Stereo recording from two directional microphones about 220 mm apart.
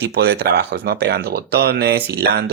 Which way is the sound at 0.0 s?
50° right (ahead or behind).